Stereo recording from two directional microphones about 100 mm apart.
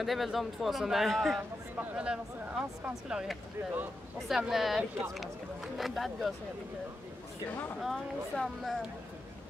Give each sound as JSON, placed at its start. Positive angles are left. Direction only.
{"t": 0.0, "sound": "a man's voice", "side_deg": 0}
{"t": 1.8, "sound": "a man's voice", "side_deg": -15}
{"t": 4.4, "sound": "a man's voice", "side_deg": -5}
{"t": 7.8, "sound": "a man's voice", "side_deg": 0}